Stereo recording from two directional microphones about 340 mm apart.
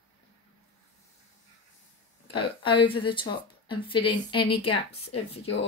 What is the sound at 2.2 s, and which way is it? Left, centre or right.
A woman's voice, centre.